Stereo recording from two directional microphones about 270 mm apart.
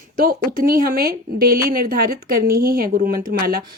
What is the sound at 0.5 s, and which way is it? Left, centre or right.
Speech, right.